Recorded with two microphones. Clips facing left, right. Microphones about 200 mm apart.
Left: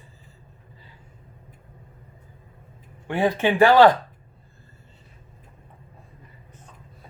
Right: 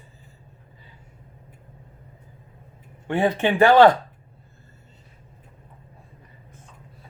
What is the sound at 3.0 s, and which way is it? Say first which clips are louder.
Speech: right 1 dB; 25° right (ahead or behind).